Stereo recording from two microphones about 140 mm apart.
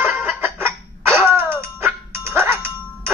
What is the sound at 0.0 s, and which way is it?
Music, 15° right (ahead or behind).